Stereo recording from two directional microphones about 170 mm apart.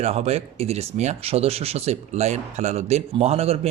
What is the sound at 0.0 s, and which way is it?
Speech, 40° right (ahead or behind).